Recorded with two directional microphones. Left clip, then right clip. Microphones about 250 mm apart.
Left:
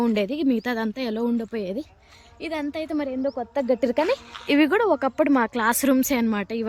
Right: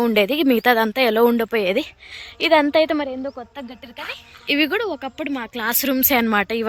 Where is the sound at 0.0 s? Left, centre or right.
Centre.